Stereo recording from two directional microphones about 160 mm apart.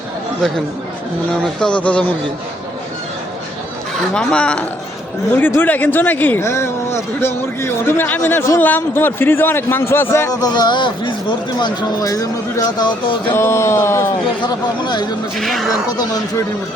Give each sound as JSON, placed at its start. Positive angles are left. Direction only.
{"t": 1.5, "sound": "speech", "side_deg": 5}
{"t": 4.1, "sound": "speech", "side_deg": 5}
{"t": 13.3, "sound": "speech", "side_deg": 15}
{"t": 14.4, "sound": "speech", "side_deg": 25}
{"t": 15.4, "sound": "speech", "side_deg": 0}